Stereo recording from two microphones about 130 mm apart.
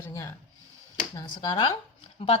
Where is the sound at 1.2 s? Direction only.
35° left (ahead or behind).